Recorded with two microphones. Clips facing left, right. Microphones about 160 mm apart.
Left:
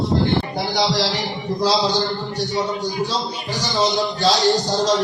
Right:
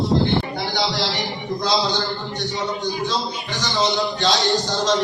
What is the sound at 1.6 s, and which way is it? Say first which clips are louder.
Speech: left 3 dB; 35° left (ahead or behind).